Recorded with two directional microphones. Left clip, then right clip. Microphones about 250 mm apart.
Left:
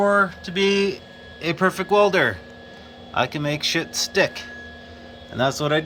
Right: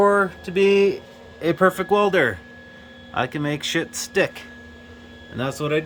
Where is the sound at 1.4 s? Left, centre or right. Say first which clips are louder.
Right 3 dB; right.